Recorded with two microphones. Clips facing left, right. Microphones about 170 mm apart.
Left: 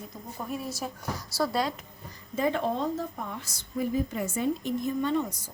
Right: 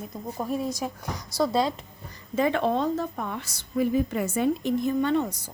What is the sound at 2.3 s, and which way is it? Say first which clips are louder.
A woman's voice: right 4 dB; 80° right.